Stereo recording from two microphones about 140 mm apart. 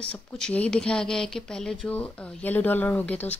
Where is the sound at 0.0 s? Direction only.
5° left (ahead or behind).